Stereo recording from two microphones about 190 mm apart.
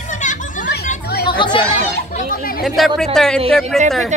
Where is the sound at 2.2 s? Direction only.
50° left (ahead or behind).